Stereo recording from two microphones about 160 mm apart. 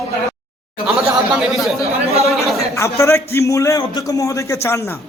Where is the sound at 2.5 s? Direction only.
20° left (ahead or behind).